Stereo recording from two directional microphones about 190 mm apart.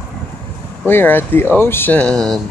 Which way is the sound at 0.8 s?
10° left (ahead or behind).